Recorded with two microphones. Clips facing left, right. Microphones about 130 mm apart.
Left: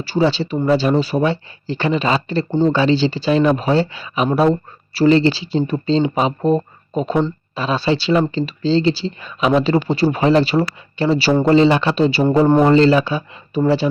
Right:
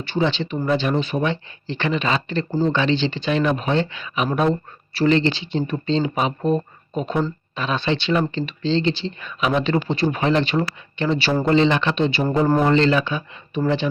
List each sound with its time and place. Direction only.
0.0 s speech: 35° left (ahead or behind)